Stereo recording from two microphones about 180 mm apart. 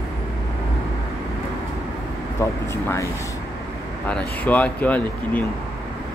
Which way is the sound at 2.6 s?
15° left (ahead or behind).